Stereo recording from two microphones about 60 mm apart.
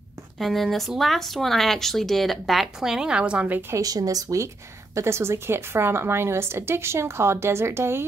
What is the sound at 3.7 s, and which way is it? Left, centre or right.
A woman's voice, right.